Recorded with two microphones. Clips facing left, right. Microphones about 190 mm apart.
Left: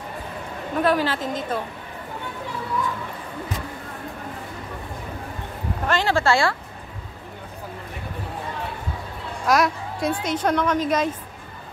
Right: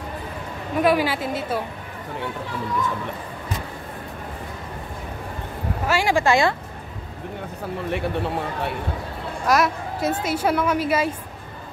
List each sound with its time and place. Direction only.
0.8 s a woman's voice: 10° right (ahead or behind)
5.9 s a woman's voice: 10° right (ahead or behind)
7.9 s speech: 75° right (ahead or behind)
9.5 s a woman's voice: centre (ahead or behind)